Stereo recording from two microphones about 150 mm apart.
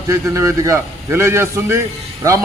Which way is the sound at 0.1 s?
20° right (ahead or behind).